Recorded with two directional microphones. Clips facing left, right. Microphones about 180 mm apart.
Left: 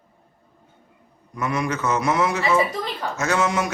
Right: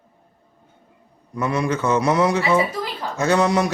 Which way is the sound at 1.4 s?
30° right (ahead or behind).